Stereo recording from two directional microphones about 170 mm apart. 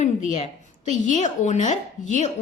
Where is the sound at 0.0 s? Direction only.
45° left (ahead or behind).